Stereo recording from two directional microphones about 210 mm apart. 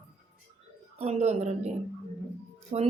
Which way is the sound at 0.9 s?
30° right (ahead or behind).